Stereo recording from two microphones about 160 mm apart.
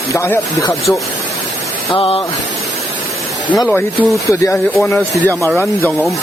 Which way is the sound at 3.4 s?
25° left (ahead or behind).